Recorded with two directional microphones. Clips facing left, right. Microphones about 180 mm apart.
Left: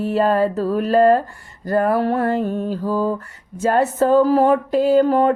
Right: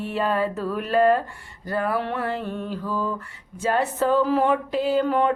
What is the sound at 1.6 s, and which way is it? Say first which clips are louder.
Speech: left 7 dB; 45° left (ahead or behind).